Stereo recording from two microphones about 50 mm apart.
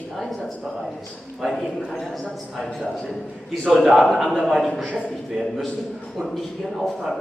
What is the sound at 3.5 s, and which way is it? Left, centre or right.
A woman's voice, centre.